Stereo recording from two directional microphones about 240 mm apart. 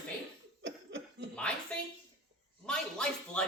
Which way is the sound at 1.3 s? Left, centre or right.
Centre.